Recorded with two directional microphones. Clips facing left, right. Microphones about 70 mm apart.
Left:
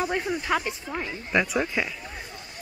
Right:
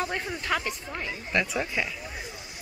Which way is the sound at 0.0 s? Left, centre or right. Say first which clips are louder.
Left 4 dB; centre.